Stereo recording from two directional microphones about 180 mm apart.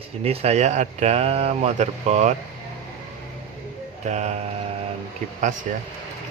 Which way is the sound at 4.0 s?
40° right (ahead or behind).